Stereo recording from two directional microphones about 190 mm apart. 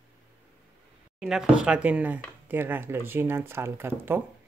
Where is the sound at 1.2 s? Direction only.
5° right (ahead or behind).